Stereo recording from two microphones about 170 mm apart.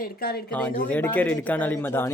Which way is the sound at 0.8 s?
10° left (ahead or behind).